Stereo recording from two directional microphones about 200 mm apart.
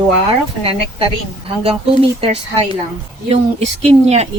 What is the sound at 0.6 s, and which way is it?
Speech, 30° right (ahead or behind).